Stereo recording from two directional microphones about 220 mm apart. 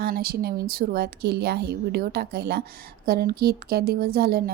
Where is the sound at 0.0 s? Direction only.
45° right (ahead or behind).